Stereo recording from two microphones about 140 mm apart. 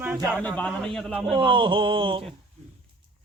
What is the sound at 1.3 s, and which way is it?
Speech, 35° right (ahead or behind).